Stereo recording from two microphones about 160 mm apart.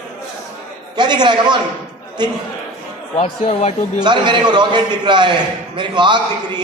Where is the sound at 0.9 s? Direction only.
25° right (ahead or behind).